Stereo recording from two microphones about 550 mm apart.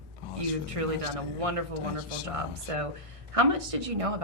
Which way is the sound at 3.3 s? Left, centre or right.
Right.